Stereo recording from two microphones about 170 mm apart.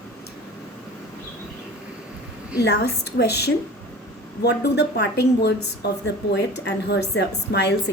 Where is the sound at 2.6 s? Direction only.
75° left (ahead or behind).